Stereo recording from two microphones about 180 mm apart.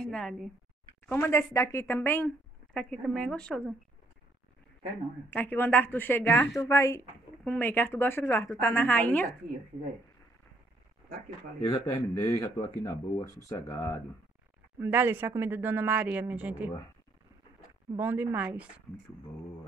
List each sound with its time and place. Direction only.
0.0 s speech: centre (ahead or behind)
1.0 s speech: 15° left (ahead or behind)
5.3 s speech: 10° left (ahead or behind)
11.7 s speech: 15° left (ahead or behind)
14.8 s speech: 10° right (ahead or behind)
17.9 s speech: 10° right (ahead or behind)